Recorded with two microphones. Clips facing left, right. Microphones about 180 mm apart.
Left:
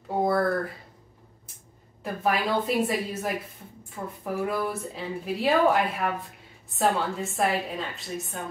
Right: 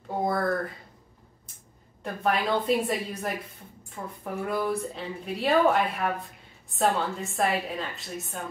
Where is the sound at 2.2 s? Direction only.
5° left (ahead or behind).